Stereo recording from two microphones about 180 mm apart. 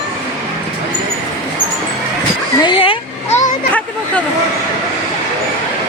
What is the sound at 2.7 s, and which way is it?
Speech, 30° left (ahead or behind).